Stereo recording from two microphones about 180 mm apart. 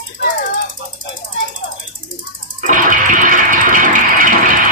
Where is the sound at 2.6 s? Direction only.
45° right (ahead or behind).